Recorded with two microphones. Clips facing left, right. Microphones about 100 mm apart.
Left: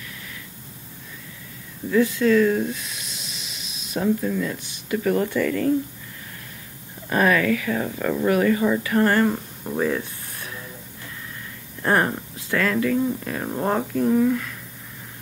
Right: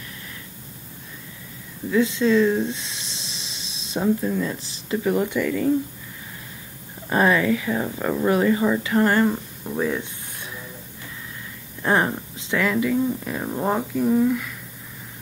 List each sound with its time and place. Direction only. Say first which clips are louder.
1.9 s a sound: left 1 dB; 20° right (ahead or behind)
4.0 s speech: even; 15° right (ahead or behind)
4.6 s speech: even; 30° right (ahead or behind)
4.9 s speech: even; 15° right (ahead or behind)
7.1 s speech: even; 25° right (ahead or behind)
9.3 s speech: left 1 dB; 10° left (ahead or behind)
11.8 s speech: even; 15° right (ahead or behind)
13.4 s speech: even; centre (ahead or behind)